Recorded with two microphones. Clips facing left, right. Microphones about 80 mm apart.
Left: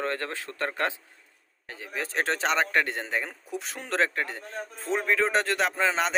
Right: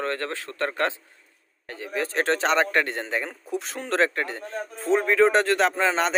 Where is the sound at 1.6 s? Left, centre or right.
Centre.